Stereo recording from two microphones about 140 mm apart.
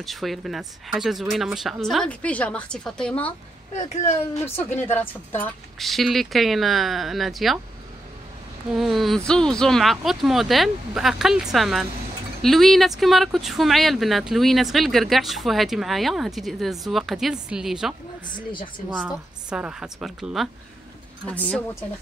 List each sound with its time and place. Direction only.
0.0 s speech: centre (ahead or behind)
3.7 s a child's voice: 55° left (ahead or behind)
4.3 s a woman's voice: 15° left (ahead or behind)
5.8 s speech: centre (ahead or behind)
8.7 s speech: centre (ahead or behind)
19.0 s speech: 10° right (ahead or behind)
21.3 s a woman's voice: 10° left (ahead or behind)